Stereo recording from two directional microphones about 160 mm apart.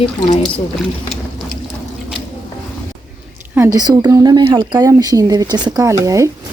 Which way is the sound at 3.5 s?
15° right (ahead or behind).